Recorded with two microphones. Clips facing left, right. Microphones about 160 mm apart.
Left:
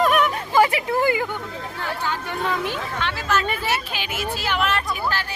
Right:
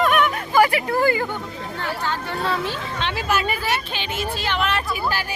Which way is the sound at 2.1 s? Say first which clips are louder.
Right 1 dB; 15° left (ahead or behind).